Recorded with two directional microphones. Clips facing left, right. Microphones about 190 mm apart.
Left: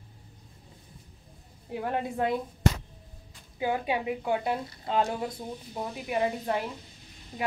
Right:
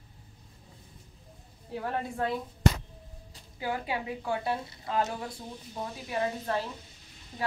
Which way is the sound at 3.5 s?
20° left (ahead or behind).